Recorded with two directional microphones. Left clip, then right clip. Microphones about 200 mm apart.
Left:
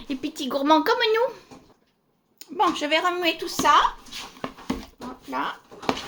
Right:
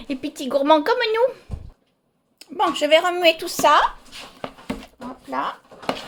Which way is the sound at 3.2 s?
55° right (ahead or behind).